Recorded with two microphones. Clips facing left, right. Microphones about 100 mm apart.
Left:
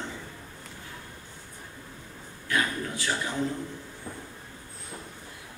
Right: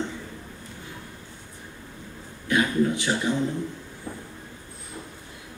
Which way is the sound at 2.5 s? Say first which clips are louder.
Right 5 dB; 20° right (ahead or behind).